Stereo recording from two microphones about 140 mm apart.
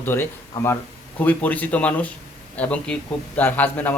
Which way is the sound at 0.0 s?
15° left (ahead or behind).